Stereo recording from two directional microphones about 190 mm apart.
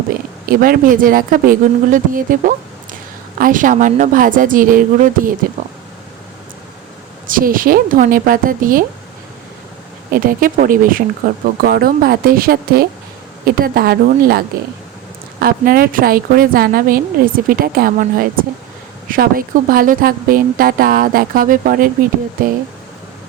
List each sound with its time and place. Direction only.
0.6 s a woman's voice: 45° right (ahead or behind)
7.3 s a woman's voice: 45° right (ahead or behind)
10.1 s a woman's voice: 50° right (ahead or behind)